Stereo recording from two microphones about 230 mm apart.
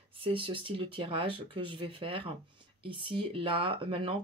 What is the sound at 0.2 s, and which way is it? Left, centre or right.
Speech, right.